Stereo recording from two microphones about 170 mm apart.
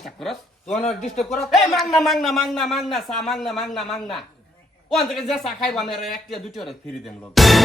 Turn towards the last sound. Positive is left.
turn(degrees=0)  # may be behind; listen again after turning